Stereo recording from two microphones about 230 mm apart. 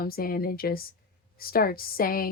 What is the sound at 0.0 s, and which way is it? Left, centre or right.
A woman's voice, left.